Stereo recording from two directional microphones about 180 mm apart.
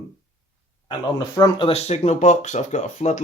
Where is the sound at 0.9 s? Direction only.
25° left (ahead or behind).